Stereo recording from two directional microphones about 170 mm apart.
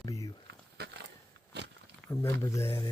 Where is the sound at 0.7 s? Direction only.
80° right.